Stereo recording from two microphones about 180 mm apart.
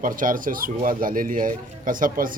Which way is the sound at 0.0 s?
50° right (ahead or behind).